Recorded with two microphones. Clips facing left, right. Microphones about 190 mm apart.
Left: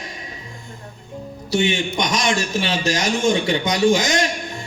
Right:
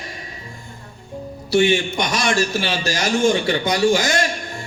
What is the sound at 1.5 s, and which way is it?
A man's voice, 20° left (ahead or behind).